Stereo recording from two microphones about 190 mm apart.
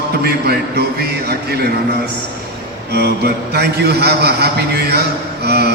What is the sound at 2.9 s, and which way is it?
A man's voice, 60° right (ahead or behind).